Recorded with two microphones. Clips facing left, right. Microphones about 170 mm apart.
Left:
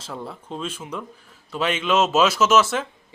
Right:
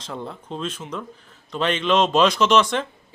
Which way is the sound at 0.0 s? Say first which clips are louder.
Right 1 dB; 5° left (ahead or behind).